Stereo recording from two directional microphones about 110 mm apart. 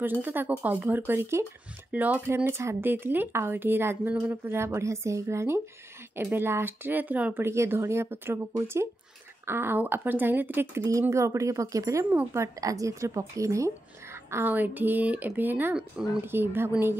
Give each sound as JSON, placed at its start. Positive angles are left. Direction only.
{"t": 0.0, "sound": "speech", "side_deg": -15}
{"t": 4.1, "sound": "speech", "side_deg": -10}
{"t": 4.5, "sound": "speech", "side_deg": -20}
{"t": 10.8, "sound": "speech", "side_deg": -30}
{"t": 14.3, "sound": "speech", "side_deg": -15}
{"t": 16.0, "sound": "speech", "side_deg": -5}
{"t": 16.3, "sound": "speech", "side_deg": -20}